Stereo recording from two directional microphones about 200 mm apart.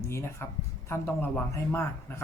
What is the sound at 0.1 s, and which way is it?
Speech, 15° left (ahead or behind).